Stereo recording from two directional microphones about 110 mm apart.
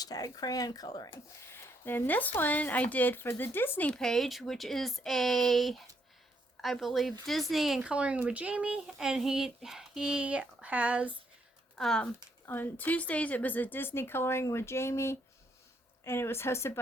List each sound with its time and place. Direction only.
0.0 s speech: 35° left (ahead or behind)
1.1 s a child's voice: 20° left (ahead or behind); by 11.2 s 10° right (ahead or behind)
11.8 s speech: 5° left (ahead or behind)
12.5 s a woman's voice: 15° left (ahead or behind)